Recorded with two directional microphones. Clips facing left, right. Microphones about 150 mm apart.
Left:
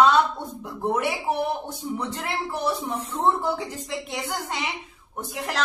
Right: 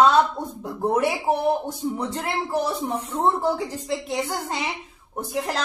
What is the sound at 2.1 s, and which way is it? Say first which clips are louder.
A woman's voice: right 4 dB; 35° right (ahead or behind).